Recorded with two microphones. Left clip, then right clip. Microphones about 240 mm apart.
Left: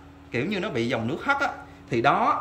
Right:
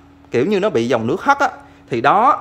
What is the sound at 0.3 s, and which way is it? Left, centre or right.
Speech, centre.